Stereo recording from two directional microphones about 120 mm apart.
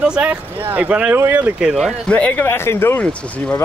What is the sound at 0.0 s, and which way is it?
Speech, 10° right (ahead or behind).